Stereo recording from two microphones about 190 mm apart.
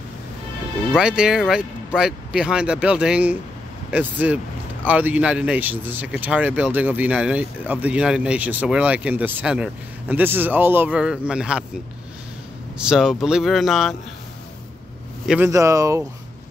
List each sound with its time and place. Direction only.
0.9 s speech: 5° right (ahead or behind)
12.7 s speech: 5° right (ahead or behind)
15.2 s speech: 10° right (ahead or behind)